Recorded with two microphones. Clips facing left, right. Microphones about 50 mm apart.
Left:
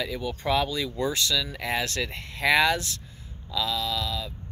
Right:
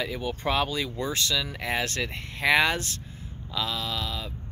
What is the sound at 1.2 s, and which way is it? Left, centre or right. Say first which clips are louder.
Speech: left 1 dB; centre.